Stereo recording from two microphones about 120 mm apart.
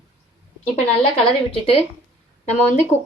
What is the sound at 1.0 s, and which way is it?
Speech, 50° left (ahead or behind).